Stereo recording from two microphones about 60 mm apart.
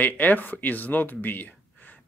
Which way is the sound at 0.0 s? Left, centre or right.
Left.